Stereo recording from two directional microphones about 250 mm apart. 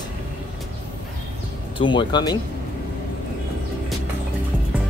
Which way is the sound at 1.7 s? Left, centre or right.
Centre.